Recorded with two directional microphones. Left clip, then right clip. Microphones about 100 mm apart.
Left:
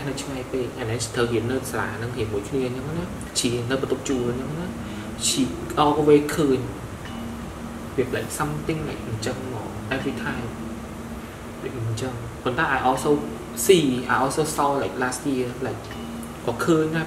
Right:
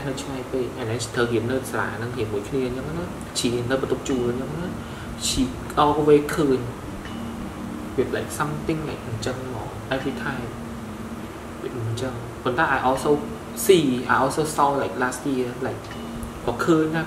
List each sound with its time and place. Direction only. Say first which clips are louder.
0.9 s a woman's voice: even; 10° right (ahead or behind)
4.1 s speech: right 1 dB; centre (ahead or behind)
5.8 s a woman's voice: even; 15° right (ahead or behind)
8.1 s a woman's voice: right 1 dB; 15° right (ahead or behind)
12.0 s a woman's voice: right 1 dB; 10° right (ahead or behind)